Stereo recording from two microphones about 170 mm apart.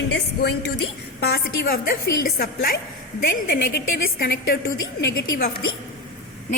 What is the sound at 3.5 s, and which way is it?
A woman's voice, 75° left (ahead or behind).